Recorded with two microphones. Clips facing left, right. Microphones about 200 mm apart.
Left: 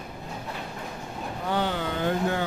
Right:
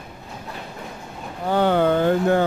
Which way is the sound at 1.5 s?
55° right (ahead or behind).